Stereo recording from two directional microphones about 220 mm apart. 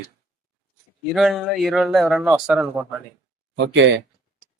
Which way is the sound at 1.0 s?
Centre (ahead or behind).